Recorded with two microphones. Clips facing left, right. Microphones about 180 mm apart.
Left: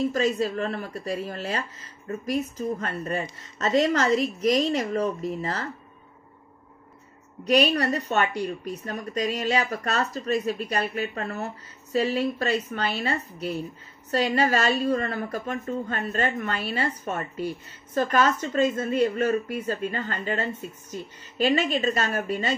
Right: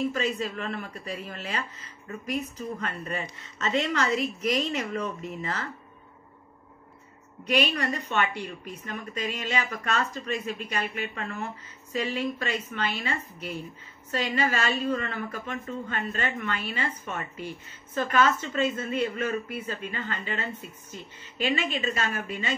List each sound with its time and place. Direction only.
0.1 s speech: 35° left (ahead or behind)
7.4 s speech: 40° left (ahead or behind)